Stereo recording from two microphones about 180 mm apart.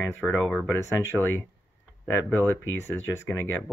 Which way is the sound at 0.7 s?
15° left (ahead or behind).